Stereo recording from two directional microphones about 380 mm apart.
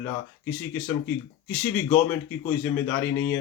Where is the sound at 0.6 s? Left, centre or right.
Centre.